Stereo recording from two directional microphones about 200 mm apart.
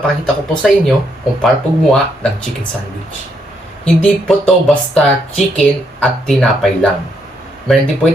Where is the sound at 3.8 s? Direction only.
Centre (ahead or behind).